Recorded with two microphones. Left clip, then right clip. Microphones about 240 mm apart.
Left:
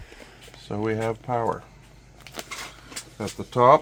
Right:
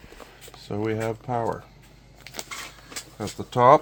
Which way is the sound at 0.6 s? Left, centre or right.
Centre.